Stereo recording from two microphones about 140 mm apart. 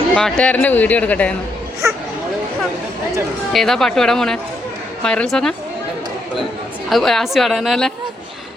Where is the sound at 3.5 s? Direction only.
Centre (ahead or behind).